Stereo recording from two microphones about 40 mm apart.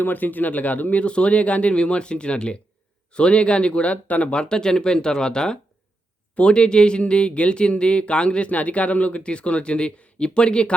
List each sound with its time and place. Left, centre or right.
0.0 s speech: left
1.0 s speech: left